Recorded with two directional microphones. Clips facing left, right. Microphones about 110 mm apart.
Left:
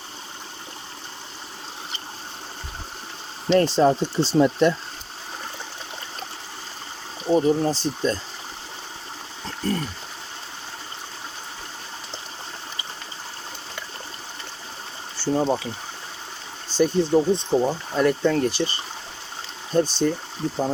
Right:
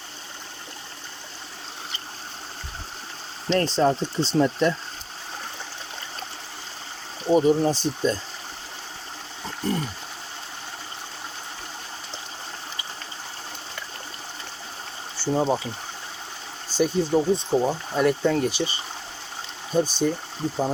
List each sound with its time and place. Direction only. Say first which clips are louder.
3.5 s speech: left 3 dB; 5° left (ahead or behind)
7.3 s speech: right 1 dB; 5° right (ahead or behind)
9.6 s speech: left 1 dB; 15° right (ahead or behind)
15.2 s speech: left 1 dB; 5° right (ahead or behind)
16.6 s speech: left 2 dB; 10° right (ahead or behind)
19.7 s speech: left 2 dB; 10° right (ahead or behind)